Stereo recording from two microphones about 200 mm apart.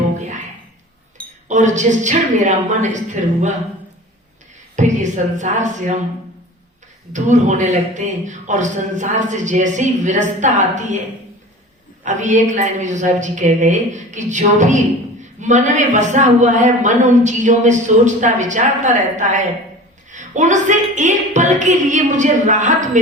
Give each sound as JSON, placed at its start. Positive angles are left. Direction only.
{"t": 1.5, "sound": "a man's voice", "side_deg": -35}
{"t": 4.8, "sound": "a man's voice", "side_deg": -35}
{"t": 7.1, "sound": "a man's voice", "side_deg": -35}
{"t": 12.0, "sound": "a man's voice", "side_deg": -40}